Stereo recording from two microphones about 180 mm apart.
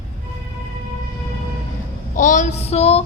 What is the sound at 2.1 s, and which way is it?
Speech, 45° left (ahead or behind).